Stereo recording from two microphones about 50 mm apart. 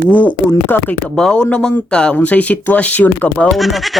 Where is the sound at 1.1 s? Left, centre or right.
Centre.